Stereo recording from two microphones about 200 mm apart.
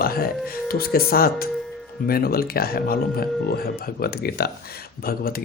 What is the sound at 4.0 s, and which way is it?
Speech, 50° left (ahead or behind).